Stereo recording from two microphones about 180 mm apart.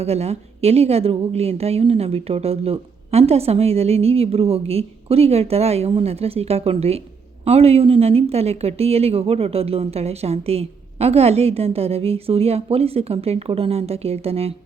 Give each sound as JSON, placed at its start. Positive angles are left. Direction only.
{"t": 0.0, "sound": "a woman's voice", "side_deg": -35}